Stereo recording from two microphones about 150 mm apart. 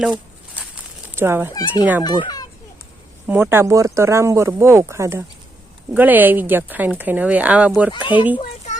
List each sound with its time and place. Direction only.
0.0 s a sound: 5° right (ahead or behind)
1.1 s speech: 15° right (ahead or behind)
2.0 s a child's voice: 25° left (ahead or behind)
3.2 s speech: 10° right (ahead or behind)
7.9 s a child's voice: 30° left (ahead or behind)